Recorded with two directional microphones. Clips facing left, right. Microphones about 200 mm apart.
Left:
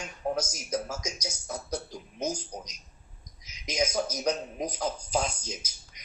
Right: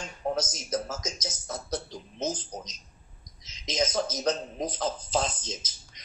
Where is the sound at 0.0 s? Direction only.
10° left (ahead or behind).